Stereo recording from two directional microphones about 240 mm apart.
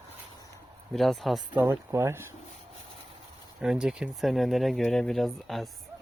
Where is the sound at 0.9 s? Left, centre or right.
Centre.